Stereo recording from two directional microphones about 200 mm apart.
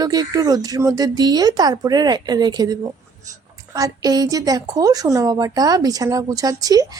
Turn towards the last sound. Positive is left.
turn(degrees=-20)  # may be behind; listen again after turning